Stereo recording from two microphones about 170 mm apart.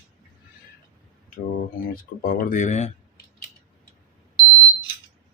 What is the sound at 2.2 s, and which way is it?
Speech, 60° left (ahead or behind).